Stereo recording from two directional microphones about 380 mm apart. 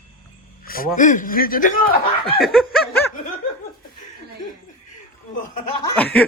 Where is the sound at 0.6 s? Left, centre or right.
Left.